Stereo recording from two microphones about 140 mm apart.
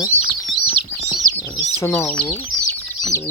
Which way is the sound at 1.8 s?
15° left (ahead or behind).